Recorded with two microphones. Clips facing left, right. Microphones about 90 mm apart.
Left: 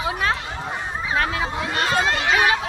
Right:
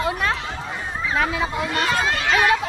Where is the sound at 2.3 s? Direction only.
5° left (ahead or behind).